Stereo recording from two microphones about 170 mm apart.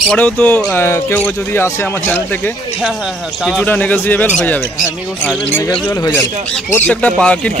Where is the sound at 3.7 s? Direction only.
10° left (ahead or behind).